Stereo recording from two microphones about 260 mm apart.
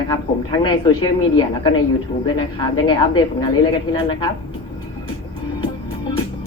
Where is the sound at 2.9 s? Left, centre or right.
Centre.